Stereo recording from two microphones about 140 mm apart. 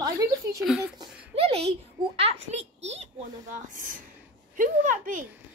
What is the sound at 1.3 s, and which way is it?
A child's voice, 45° right (ahead or behind).